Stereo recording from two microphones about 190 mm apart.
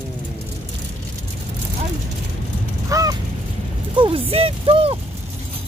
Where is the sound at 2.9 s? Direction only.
20° right (ahead or behind).